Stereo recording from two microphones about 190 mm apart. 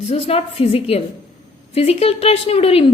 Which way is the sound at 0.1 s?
30° left (ahead or behind).